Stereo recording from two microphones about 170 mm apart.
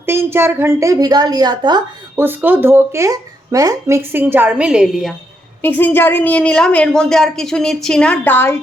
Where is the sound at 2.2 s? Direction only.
10° right (ahead or behind).